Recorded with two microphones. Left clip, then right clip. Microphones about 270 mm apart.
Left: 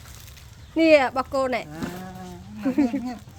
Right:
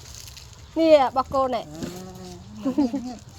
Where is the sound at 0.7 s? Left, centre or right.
Left.